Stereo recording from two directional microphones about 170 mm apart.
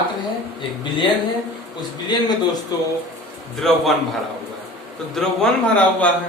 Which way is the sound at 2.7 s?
20° left (ahead or behind).